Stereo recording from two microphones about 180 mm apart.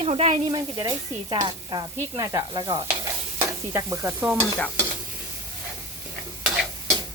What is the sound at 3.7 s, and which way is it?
Speech, 15° right (ahead or behind).